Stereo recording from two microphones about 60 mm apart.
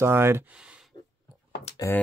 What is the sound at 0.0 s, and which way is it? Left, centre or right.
Speech, right.